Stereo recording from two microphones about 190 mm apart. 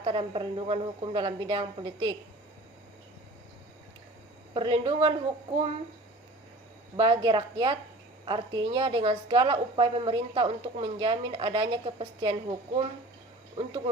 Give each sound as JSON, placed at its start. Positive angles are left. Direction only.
{"t": 0.0, "sound": "a woman's voice", "side_deg": -25}
{"t": 4.5, "sound": "a woman's voice", "side_deg": -25}
{"t": 6.9, "sound": "a woman's voice", "side_deg": -25}